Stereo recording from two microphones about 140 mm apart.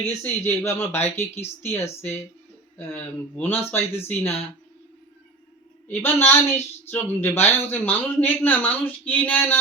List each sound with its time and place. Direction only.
0.1 s speech: 20° left (ahead or behind)
5.9 s speech: 15° left (ahead or behind)